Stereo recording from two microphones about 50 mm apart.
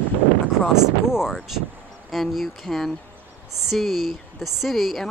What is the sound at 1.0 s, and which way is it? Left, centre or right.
Speech, centre.